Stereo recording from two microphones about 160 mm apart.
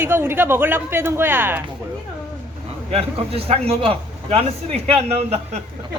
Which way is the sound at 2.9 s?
40° right (ahead or behind).